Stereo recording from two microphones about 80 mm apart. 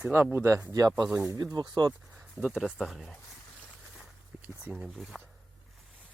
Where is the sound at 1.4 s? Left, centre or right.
Right.